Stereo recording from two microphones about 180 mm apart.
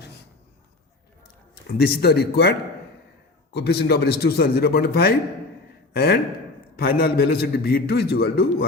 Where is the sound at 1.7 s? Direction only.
60° left (ahead or behind).